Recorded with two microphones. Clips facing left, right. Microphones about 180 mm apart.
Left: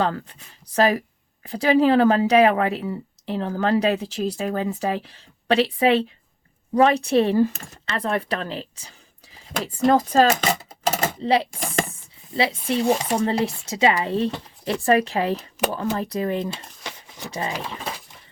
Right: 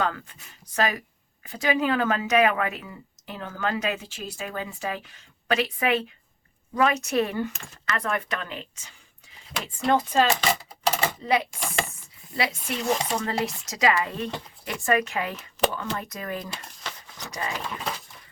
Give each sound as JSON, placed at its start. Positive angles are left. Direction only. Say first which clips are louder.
{"t": 0.0, "sound": "speech", "louder": "left 4 dB", "side_deg": 35}
{"t": 11.2, "sound": "speech", "louder": "left 4 dB", "side_deg": 30}
{"t": 16.8, "sound": "a sound", "louder": "left 2 dB", "side_deg": 15}
{"t": 17.3, "sound": "speech", "louder": "left 3 dB", "side_deg": 25}